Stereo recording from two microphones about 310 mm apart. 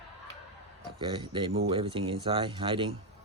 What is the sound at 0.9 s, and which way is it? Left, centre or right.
Speech, centre.